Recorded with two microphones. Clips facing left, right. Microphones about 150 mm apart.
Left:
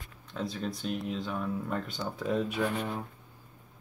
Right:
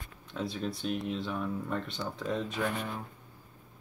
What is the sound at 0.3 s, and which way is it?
Speech, centre (ahead or behind).